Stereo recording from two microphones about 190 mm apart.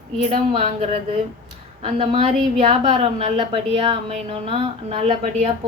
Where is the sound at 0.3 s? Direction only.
30° right (ahead or behind).